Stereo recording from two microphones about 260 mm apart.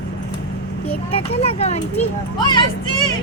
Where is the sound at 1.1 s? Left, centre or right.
Left.